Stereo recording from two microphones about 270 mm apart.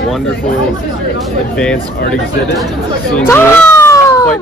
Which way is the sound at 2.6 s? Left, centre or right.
Centre.